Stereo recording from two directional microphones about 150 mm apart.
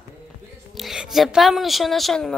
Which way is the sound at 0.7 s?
Centre (ahead or behind).